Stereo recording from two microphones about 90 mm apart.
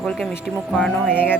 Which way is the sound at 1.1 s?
20° left (ahead or behind).